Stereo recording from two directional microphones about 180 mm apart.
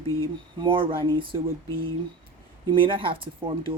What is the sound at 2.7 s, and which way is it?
Speech, 30° right (ahead or behind).